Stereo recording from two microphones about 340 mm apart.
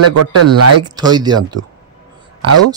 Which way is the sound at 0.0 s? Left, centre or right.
Right.